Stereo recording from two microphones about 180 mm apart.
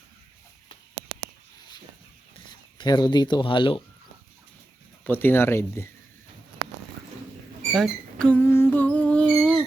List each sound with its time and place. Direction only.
2.7 s speech: 25° left (ahead or behind)
5.0 s speech: 10° left (ahead or behind)
7.7 s music: 5° left (ahead or behind)